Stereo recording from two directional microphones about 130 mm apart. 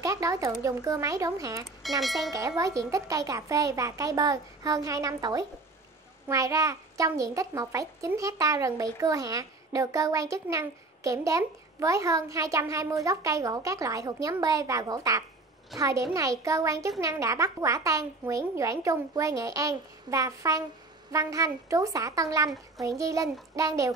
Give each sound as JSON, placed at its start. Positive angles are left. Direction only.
{"t": 0.0, "sound": "a child's voice", "side_deg": -25}
{"t": 1.8, "sound": "speech", "side_deg": 0}
{"t": 2.3, "sound": "a child's voice", "side_deg": -25}